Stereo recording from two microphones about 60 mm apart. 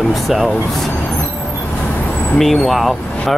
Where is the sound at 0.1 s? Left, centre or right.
Centre.